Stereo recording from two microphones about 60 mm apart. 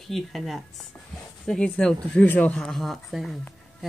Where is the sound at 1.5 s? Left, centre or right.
Centre.